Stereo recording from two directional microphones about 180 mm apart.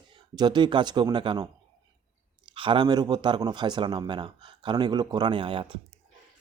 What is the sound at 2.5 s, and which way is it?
Speech, 30° right (ahead or behind).